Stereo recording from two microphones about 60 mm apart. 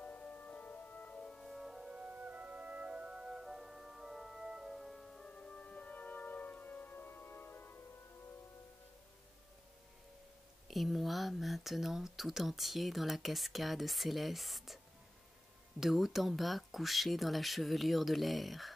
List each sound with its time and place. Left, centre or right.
0.0 s music: left
1.2 s organ: centre
1.5 s music: centre
2.0 s organ: right; by 5.2 s centre
5.2 s music: centre; by 7.7 s left
10.7 s speech: centre
15.8 s speech: centre